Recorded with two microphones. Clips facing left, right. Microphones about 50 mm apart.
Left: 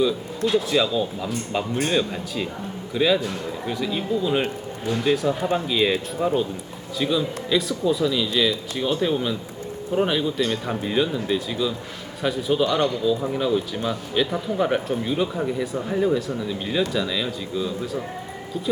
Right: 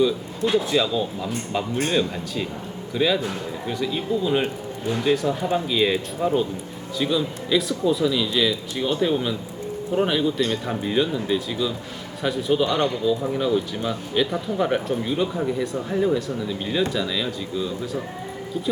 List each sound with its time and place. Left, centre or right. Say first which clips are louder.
0.5 s a man's voice: even; centre